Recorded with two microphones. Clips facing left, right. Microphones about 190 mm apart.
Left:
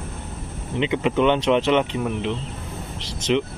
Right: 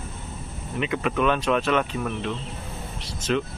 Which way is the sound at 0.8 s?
25° left (ahead or behind).